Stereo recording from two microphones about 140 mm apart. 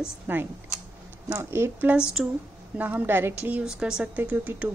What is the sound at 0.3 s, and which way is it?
A woman's voice, 10° right (ahead or behind).